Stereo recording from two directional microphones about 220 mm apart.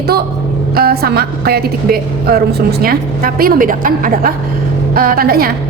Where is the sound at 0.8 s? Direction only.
45° right (ahead or behind).